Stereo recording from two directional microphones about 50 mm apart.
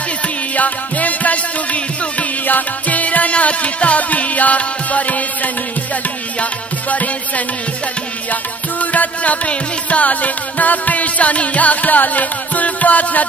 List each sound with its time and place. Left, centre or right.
0.6 s music: left
6.9 s music: left
8.9 s music: left